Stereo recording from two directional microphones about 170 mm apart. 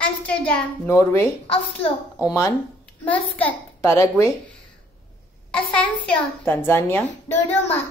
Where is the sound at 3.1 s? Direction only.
10° left (ahead or behind).